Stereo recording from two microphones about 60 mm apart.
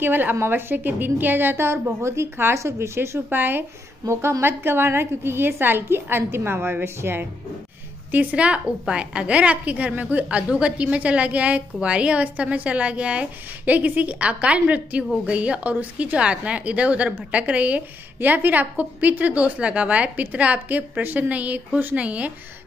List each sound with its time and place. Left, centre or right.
0.0 s a woman's voice: right
3.3 s a woman's voice: right
4.1 s a woman's voice: right
8.1 s a woman's voice: right